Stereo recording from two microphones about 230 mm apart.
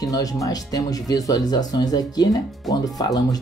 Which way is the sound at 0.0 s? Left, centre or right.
Centre.